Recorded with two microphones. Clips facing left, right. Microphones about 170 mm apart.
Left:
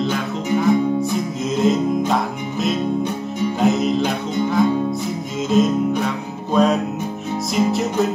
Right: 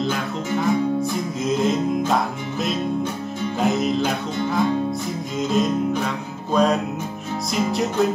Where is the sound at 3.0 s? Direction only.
15° left (ahead or behind).